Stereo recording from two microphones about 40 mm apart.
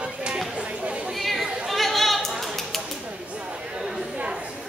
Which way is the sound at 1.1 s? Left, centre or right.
Centre.